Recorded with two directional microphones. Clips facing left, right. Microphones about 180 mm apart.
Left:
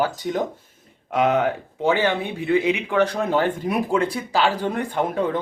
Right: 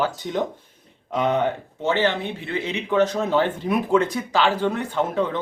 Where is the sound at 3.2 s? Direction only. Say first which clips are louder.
Even; 45° left (ahead or behind).